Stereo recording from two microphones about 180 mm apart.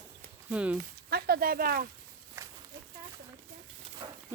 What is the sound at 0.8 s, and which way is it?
Speech, 55° right (ahead or behind).